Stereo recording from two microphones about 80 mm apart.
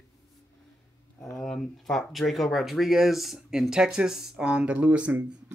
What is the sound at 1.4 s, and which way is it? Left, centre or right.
Speech, centre.